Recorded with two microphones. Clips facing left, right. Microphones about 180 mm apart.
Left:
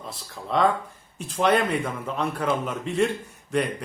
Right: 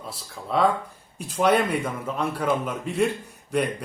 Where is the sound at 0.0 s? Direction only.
5° right (ahead or behind).